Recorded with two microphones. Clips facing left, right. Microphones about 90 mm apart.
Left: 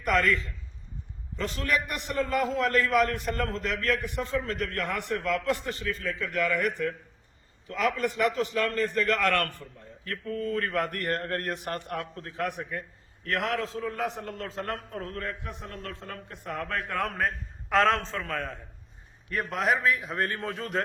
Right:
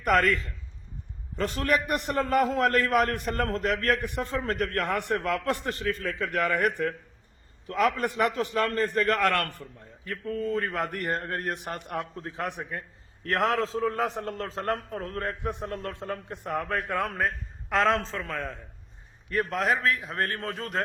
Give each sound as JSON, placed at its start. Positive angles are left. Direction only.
{"t": 0.0, "sound": "a man's voice", "side_deg": -50}
{"t": 1.4, "sound": "a man's voice", "side_deg": -45}
{"t": 10.0, "sound": "a man's voice", "side_deg": -15}
{"t": 13.2, "sound": "a man's voice", "side_deg": -35}